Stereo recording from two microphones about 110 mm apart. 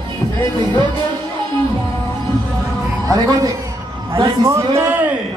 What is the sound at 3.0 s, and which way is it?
A man's voice, 30° right (ahead or behind).